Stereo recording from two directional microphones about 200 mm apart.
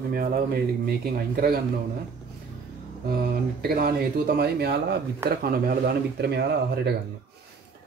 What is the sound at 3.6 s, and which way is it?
Speech, 50° right (ahead or behind).